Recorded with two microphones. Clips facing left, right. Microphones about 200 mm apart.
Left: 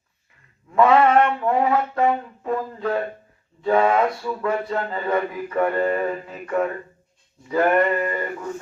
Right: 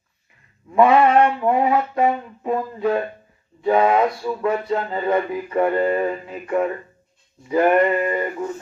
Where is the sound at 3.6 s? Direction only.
20° right (ahead or behind).